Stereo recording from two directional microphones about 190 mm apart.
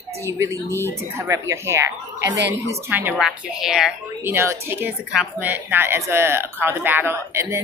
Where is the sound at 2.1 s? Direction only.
65° right (ahead or behind).